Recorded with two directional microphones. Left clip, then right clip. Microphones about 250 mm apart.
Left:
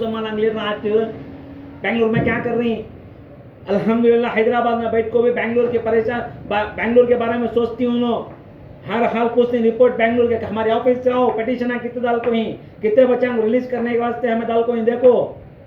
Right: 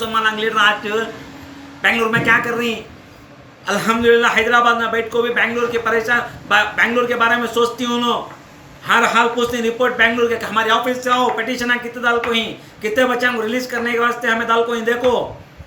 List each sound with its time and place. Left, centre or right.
0.0 s a man's voice: right